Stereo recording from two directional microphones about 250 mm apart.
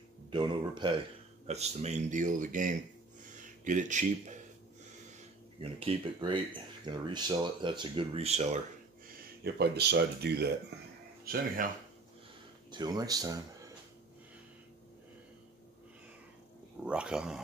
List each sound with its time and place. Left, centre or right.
0.3 s speech: centre
5.6 s speech: right
9.4 s speech: right
12.7 s speech: centre
16.8 s speech: centre